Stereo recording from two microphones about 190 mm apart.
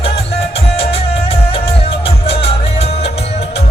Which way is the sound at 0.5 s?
30° left (ahead or behind).